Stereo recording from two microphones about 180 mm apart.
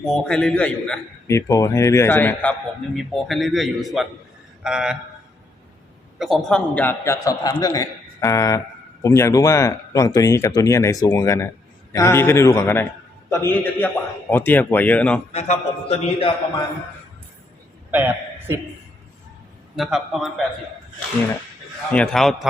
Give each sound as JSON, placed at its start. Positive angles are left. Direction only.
{"t": 0.0, "sound": "a man's voice", "side_deg": 5}
{"t": 1.4, "sound": "a man's voice", "side_deg": 20}
{"t": 6.1, "sound": "a man's voice", "side_deg": 0}
{"t": 15.3, "sound": "a man's voice", "side_deg": 35}
{"t": 17.9, "sound": "a man's voice", "side_deg": -10}
{"t": 19.7, "sound": "a man's voice", "side_deg": 0}
{"t": 21.9, "sound": "a man's voice", "side_deg": 5}